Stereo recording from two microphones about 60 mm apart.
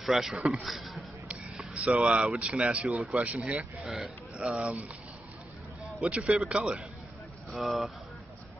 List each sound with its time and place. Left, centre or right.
0.0 s a man's voice: centre
1.8 s speech: centre
2.9 s a man's voice: centre
3.2 s speech: right
6.0 s speech: centre
7.6 s a man's voice: centre